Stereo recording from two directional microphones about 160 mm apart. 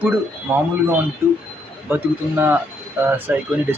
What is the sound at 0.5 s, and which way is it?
Speech, 15° right (ahead or behind).